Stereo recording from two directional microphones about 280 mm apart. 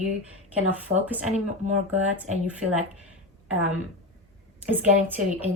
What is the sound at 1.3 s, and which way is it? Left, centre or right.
Speech, right.